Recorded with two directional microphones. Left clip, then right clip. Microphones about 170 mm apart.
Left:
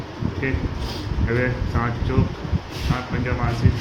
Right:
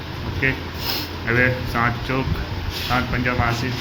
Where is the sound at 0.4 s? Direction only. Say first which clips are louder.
Right 7 dB; 10° right (ahead or behind).